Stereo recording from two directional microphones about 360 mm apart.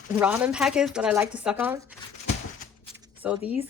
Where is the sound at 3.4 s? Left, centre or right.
Centre.